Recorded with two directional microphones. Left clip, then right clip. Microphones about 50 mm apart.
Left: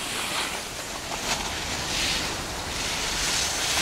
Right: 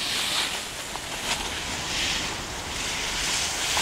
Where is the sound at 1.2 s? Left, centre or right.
Right.